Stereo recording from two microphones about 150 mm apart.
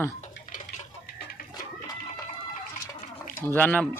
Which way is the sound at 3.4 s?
15° left (ahead or behind).